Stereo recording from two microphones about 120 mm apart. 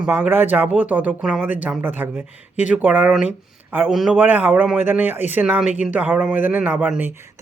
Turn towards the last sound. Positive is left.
turn(degrees=-15)  # may be behind; listen again after turning